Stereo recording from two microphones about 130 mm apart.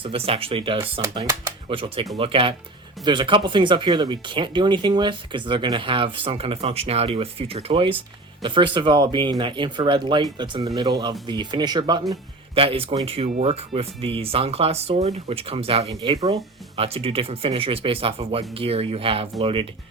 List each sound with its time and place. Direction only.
0.0 s speech: 45° right (ahead or behind)
1.1 s speech: 25° right (ahead or behind)
1.7 s speech: 45° right (ahead or behind)
12.5 s speech: 45° right (ahead or behind)
16.1 s speech: 25° right (ahead or behind)
16.7 s speech: 45° right (ahead or behind)